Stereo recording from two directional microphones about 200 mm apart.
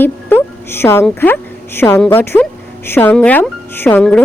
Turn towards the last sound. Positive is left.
turn(degrees=10)  # may be behind; listen again after turning